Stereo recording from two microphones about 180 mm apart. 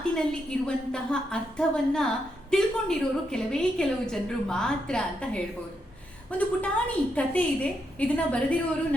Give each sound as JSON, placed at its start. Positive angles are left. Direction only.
{"t": 0.6, "sound": "a woman's voice", "side_deg": 5}